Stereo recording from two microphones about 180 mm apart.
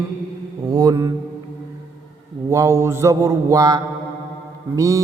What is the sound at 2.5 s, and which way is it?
Mantra, 15° right (ahead or behind).